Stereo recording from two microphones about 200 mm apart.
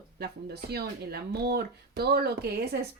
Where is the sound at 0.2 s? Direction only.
50° right (ahead or behind).